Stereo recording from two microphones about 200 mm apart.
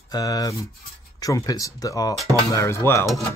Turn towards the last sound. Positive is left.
turn(degrees=15)  # may be behind; listen again after turning